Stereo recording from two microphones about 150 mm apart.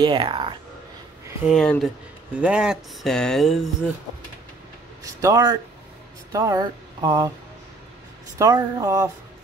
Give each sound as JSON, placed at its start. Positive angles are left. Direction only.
{"t": 0.0, "sound": "speech", "side_deg": -30}
{"t": 1.5, "sound": "speech", "side_deg": 0}
{"t": 5.0, "sound": "speech", "side_deg": -20}
{"t": 8.4, "sound": "speech", "side_deg": -25}